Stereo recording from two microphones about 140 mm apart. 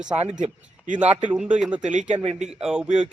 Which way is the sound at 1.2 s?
10° right (ahead or behind).